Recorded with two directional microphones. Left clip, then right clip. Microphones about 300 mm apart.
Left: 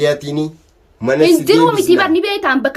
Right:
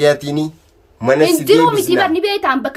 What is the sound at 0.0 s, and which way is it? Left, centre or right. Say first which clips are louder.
Speech: right 2 dB; centre.